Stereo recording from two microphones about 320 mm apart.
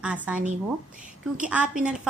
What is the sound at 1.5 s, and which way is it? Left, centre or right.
Speech, centre.